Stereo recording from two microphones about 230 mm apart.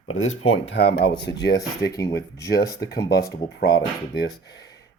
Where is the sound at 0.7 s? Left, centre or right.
Left.